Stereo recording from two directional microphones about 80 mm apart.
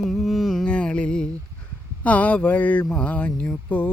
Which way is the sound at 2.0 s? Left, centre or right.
Centre.